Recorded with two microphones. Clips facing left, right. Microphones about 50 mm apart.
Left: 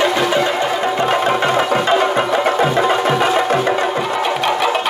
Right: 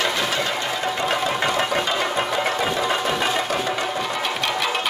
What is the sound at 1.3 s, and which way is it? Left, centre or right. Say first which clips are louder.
Music: left 6 dB; left.